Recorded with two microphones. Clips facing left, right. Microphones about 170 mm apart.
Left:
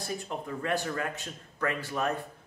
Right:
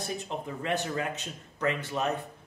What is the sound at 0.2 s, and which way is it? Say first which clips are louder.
Speech: even; 20° right (ahead or behind).